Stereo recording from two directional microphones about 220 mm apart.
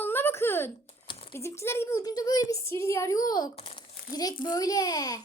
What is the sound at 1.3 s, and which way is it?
A woman's voice, 10° left (ahead or behind).